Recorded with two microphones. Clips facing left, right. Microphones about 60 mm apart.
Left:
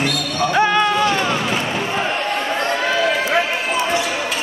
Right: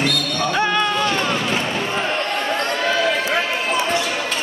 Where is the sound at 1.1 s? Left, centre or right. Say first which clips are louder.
Left 1 dB; centre.